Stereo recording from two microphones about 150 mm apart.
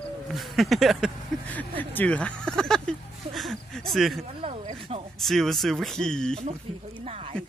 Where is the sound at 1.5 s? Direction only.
10° left (ahead or behind).